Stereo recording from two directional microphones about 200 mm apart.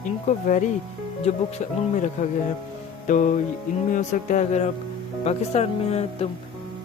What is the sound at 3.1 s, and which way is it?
Speech, 40° left (ahead or behind).